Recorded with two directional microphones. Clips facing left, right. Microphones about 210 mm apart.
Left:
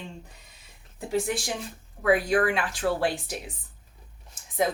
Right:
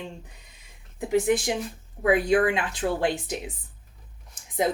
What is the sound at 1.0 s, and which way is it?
A woman's voice, 20° right (ahead or behind).